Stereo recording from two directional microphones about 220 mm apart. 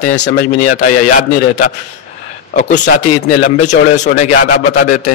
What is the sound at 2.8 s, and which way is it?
Speech, 45° left (ahead or behind).